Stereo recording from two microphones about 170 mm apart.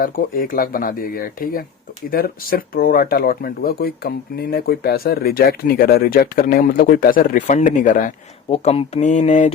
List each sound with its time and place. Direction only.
0.0 s speech: 55° left (ahead or behind)
8.4 s speech: 35° left (ahead or behind)